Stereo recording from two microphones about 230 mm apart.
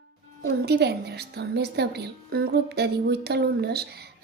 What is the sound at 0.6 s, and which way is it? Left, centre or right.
A woman's voice, right.